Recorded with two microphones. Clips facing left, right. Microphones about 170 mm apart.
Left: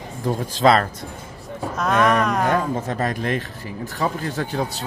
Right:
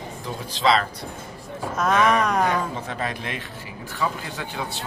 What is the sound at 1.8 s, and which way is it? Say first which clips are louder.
Speech: left 1 dB; centre (ahead or behind).